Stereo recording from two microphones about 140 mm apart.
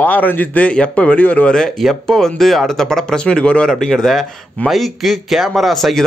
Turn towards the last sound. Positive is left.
turn(degrees=0)  # may be behind; listen again after turning